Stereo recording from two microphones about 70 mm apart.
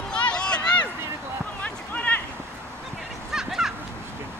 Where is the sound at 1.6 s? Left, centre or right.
Left.